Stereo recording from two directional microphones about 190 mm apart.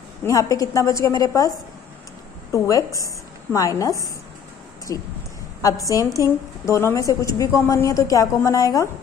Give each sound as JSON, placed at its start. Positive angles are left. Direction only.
{"t": 0.2, "sound": "a woman's voice", "side_deg": 15}
{"t": 2.5, "sound": "a woman's voice", "side_deg": 15}